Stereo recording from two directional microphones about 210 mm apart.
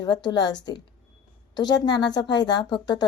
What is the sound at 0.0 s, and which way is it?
A woman's voice, 20° left (ahead or behind).